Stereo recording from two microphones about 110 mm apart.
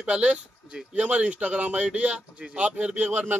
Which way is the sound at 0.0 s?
10° right (ahead or behind).